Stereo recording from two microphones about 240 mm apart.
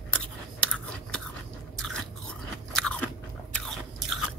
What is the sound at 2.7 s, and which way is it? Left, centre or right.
Crunch, centre.